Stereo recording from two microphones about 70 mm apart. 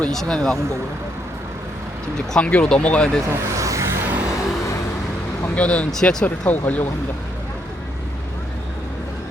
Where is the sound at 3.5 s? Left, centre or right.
Right.